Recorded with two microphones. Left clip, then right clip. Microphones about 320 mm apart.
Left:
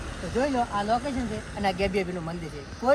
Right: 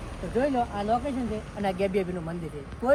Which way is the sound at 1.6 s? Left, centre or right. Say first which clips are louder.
Left 1 dB; centre.